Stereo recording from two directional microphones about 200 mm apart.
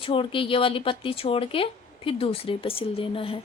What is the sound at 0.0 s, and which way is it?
Speech, 25° left (ahead or behind).